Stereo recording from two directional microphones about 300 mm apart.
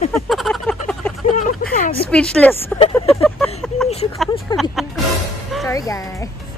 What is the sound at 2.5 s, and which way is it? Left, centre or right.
Speech, centre.